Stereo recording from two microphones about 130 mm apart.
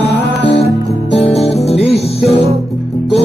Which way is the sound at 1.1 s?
55° left (ahead or behind).